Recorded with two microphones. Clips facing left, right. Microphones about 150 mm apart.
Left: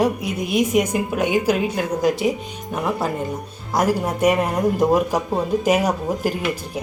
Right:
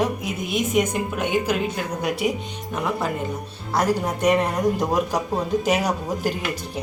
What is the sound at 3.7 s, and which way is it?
Speech, 10° left (ahead or behind).